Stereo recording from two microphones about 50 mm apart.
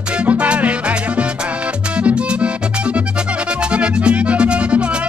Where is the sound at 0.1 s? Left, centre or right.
Right.